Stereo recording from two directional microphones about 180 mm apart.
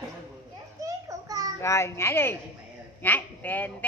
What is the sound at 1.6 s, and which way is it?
Speech, 15° left (ahead or behind).